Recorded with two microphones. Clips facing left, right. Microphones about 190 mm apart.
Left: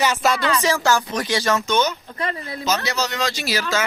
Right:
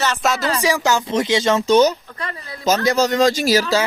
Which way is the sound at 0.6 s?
15° right (ahead or behind).